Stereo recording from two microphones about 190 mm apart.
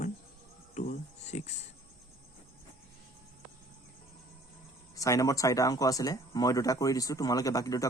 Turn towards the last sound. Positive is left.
turn(degrees=15)  # may be behind; listen again after turning